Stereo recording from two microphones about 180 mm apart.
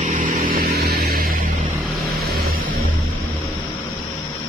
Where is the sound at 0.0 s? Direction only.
45° right (ahead or behind).